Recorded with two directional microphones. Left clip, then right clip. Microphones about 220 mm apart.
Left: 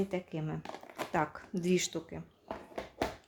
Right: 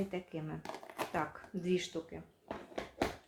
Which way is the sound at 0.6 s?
Centre (ahead or behind).